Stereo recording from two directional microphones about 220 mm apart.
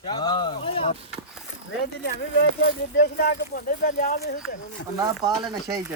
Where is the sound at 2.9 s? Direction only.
40° left (ahead or behind).